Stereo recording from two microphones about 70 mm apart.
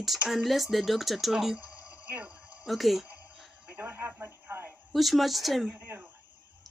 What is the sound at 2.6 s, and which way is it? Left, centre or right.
Speech, centre.